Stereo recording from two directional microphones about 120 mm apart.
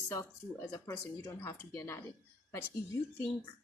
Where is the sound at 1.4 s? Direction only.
20° left (ahead or behind).